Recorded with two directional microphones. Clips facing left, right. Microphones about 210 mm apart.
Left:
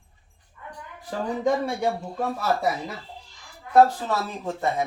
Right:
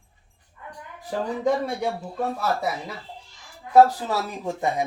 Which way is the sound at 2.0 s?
Centre (ahead or behind).